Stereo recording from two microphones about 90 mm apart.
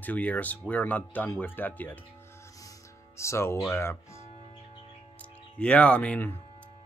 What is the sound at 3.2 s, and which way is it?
Speech, 30° left (ahead or behind).